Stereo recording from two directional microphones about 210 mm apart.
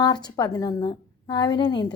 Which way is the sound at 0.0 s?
20° left (ahead or behind).